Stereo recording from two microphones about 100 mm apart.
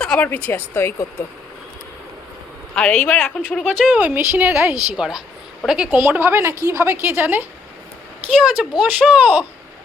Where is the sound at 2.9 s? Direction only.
20° left (ahead or behind).